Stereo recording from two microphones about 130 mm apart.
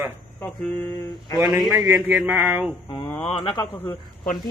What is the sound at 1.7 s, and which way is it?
Speech, 25° right (ahead or behind).